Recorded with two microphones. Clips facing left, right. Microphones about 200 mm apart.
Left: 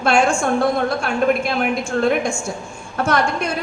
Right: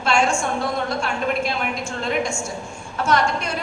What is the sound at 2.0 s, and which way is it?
A woman's voice, 55° left (ahead or behind).